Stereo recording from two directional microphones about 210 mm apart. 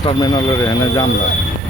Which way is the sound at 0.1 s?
20° left (ahead or behind).